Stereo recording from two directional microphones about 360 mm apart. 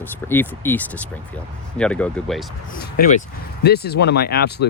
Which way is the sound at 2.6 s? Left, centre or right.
Left.